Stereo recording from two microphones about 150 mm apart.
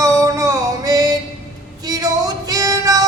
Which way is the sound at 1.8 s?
25° right (ahead or behind).